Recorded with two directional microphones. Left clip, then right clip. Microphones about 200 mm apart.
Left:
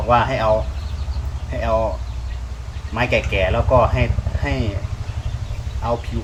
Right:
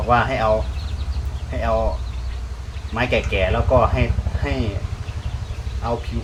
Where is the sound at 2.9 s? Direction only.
5° left (ahead or behind).